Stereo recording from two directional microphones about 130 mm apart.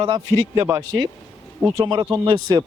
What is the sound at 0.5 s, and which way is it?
Speech, 20° right (ahead or behind).